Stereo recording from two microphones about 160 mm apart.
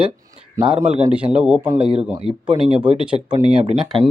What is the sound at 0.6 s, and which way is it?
Speech, 20° right (ahead or behind).